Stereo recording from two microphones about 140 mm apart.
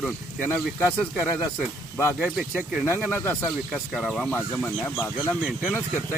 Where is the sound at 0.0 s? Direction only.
10° left (ahead or behind).